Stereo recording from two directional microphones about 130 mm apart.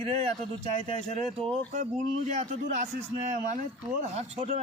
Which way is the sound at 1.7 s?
70° right (ahead or behind).